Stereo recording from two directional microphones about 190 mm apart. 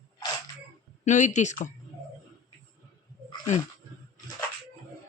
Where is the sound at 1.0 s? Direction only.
40° left (ahead or behind).